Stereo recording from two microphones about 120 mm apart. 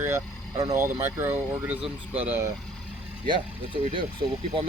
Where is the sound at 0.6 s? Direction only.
30° right (ahead or behind).